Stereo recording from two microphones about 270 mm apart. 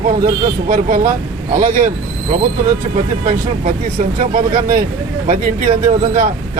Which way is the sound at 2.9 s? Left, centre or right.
Right.